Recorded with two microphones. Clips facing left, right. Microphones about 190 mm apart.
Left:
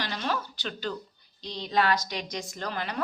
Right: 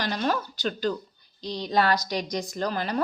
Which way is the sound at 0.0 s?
45° right (ahead or behind).